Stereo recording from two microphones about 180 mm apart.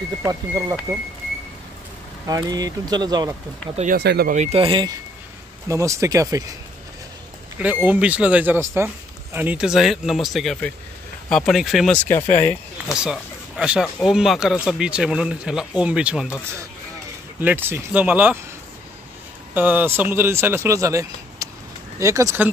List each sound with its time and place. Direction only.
0.3 s speech: 20° right (ahead or behind)
2.2 s speech: 20° right (ahead or behind)
3.7 s speech: 45° right (ahead or behind)
4.0 s speech: 65° right (ahead or behind)
4.3 s speech: 40° right (ahead or behind)
5.7 s speech: 15° right (ahead or behind)
7.5 s speech: 10° right (ahead or behind)
12.2 s speech: 40° left (ahead or behind)
12.4 s speech: 5° right (ahead or behind)
17.4 s speech: 10° right (ahead or behind)
19.5 s speech: 10° right (ahead or behind)